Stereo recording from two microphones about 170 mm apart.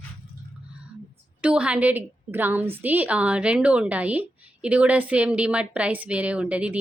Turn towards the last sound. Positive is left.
turn(degrees=-5)  # may be behind; listen again after turning